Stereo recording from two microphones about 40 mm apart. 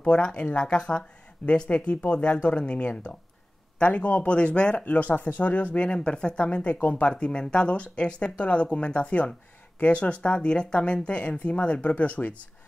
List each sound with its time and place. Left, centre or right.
0.0 s speech: left
4.7 s speech: left
5.9 s speech: left